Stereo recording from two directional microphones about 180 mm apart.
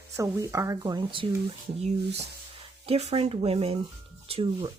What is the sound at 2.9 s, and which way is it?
Speech, 35° right (ahead or behind).